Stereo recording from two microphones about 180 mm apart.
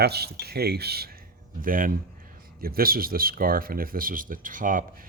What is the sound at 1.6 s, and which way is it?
Speech, 50° right (ahead or behind).